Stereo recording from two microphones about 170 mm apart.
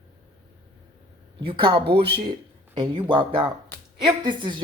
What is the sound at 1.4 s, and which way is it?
Speech, 30° right (ahead or behind).